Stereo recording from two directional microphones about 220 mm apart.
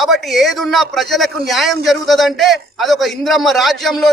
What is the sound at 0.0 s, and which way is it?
A man's voice, centre (ahead or behind).